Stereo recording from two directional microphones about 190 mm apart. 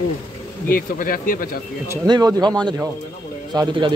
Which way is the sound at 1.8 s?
20° right (ahead or behind).